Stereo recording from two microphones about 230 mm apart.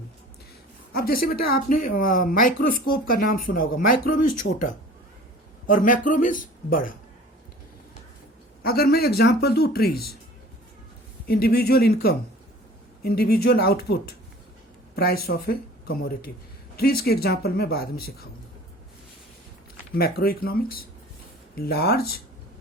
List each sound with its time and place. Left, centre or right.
0.9 s speech: left
8.6 s speech: left
11.3 s speech: left
20.0 s speech: left